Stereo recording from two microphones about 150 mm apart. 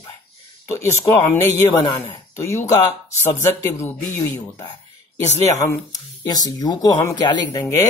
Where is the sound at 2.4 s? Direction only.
20° left (ahead or behind).